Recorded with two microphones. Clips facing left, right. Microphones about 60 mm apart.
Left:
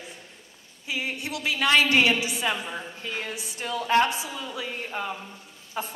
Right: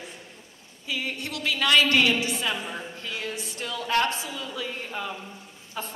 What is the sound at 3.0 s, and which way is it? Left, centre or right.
Speech, left.